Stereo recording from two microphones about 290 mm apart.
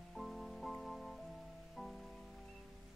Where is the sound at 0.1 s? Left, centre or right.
Centre.